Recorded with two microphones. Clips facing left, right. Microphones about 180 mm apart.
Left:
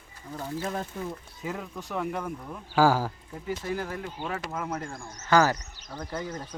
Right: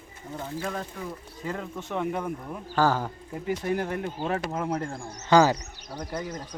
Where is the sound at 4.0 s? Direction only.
40° right (ahead or behind).